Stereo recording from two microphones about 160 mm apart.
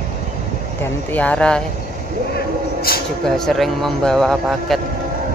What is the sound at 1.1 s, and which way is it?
Speech, 10° left (ahead or behind).